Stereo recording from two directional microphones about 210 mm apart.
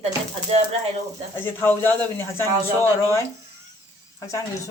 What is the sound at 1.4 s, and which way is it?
A man's voice, 10° left (ahead or behind).